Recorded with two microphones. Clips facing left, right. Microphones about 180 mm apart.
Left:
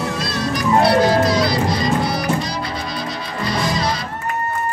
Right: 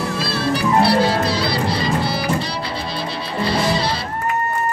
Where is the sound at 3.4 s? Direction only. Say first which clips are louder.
Right 2 dB; 30° right (ahead or behind).